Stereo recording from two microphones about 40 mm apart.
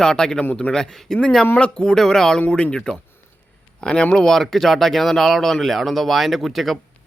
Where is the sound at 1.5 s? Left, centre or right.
Left.